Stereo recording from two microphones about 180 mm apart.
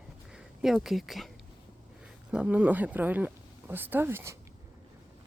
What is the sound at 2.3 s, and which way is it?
Speech, 5° right (ahead or behind).